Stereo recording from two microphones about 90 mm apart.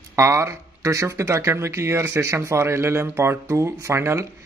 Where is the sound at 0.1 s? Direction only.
30° right (ahead or behind).